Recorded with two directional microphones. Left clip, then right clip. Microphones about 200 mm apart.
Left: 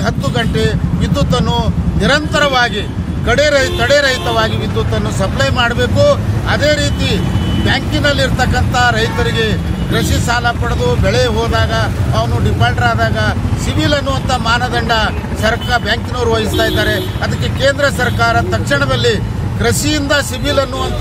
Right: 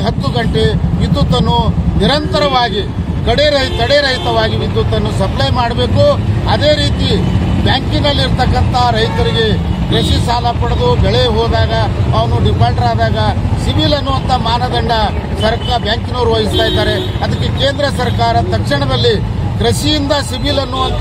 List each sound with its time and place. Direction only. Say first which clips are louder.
0.0 s speech: even; 10° left (ahead or behind)
1.1 s speech: right 1 dB; 35° left (ahead or behind)
1.5 s speech: right 3 dB; 10° left (ahead or behind)